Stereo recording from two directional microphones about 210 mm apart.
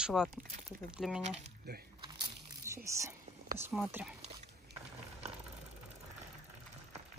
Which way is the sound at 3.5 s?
10° right (ahead or behind).